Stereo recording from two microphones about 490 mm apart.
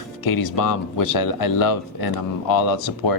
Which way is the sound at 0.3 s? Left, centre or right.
Left.